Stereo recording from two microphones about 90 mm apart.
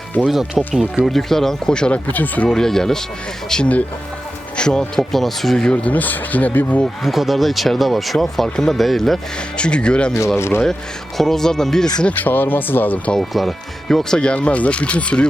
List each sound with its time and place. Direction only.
0.2 s speech: 10° right (ahead or behind)
1.0 s speech: 5° left (ahead or behind)
2.5 s speech: 5° left (ahead or behind)
6.8 s speech: centre (ahead or behind)
10.3 s speech: 30° left (ahead or behind)
11.2 s speech: 5° left (ahead or behind)
12.0 s speech: 20° left (ahead or behind)
13.1 s speech: centre (ahead or behind)